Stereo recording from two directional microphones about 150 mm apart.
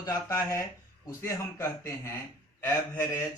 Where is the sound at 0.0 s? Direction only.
20° left (ahead or behind).